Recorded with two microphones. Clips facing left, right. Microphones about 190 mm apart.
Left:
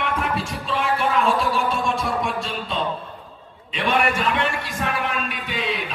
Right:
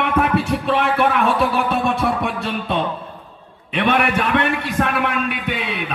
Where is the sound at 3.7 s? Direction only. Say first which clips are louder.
Right 3 dB; 60° right (ahead or behind).